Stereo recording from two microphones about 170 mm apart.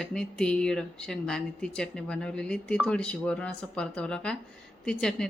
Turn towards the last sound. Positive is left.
turn(degrees=5)  # may be behind; listen again after turning